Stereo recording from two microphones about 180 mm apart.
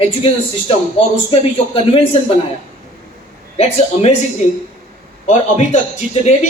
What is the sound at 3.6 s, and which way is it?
Speech, 35° left (ahead or behind).